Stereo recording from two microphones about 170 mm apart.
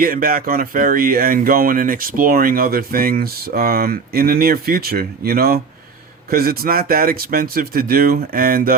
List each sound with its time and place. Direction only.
0.0 s speech: 55° right (ahead or behind)